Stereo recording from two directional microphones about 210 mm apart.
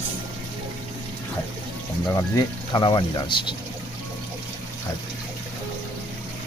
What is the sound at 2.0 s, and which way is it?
Speech, 20° left (ahead or behind).